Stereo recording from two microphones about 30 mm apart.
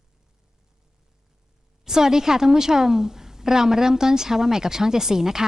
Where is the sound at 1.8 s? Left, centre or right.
Centre.